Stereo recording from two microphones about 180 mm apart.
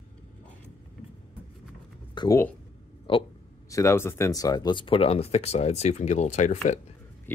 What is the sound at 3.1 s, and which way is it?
Speech, 30° left (ahead or behind).